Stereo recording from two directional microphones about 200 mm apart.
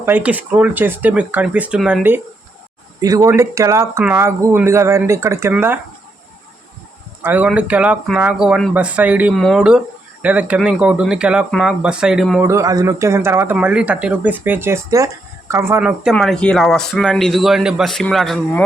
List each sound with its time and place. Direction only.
0.0 s speech: 10° right (ahead or behind)
7.2 s speech: 10° right (ahead or behind)
12.4 s speech: 15° right (ahead or behind); by 18.6 s centre (ahead or behind)